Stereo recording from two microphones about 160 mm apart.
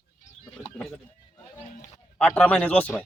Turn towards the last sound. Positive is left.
turn(degrees=10)  # may be behind; listen again after turning